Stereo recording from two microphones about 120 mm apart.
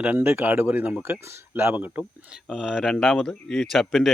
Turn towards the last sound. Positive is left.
turn(degrees=0)  # may be behind; listen again after turning